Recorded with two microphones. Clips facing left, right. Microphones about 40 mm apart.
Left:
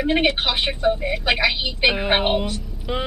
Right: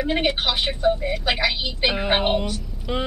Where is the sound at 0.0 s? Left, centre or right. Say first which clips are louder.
Left 2 dB; centre.